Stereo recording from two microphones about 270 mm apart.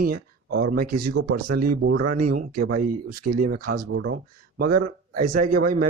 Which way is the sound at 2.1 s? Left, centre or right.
Right.